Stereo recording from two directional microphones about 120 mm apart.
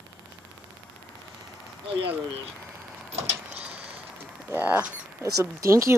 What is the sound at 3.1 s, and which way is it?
Vehicle, 60° right (ahead or behind).